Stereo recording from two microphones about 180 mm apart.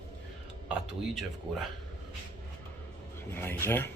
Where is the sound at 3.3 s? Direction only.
10° left (ahead or behind).